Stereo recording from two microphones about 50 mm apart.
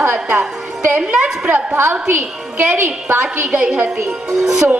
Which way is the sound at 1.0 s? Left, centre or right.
Right.